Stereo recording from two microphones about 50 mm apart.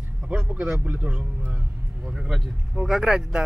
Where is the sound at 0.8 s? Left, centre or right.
Right.